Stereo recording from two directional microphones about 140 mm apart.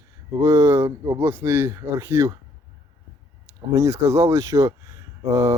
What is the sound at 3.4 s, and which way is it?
Speech, 20° right (ahead or behind).